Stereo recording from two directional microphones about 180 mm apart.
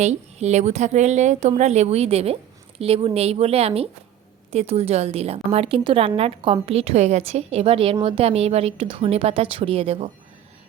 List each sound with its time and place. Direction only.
0.0 s a woman's voice: 40° right (ahead or behind)